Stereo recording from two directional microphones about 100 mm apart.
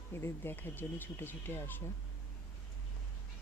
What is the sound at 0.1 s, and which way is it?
Speech, 25° left (ahead or behind).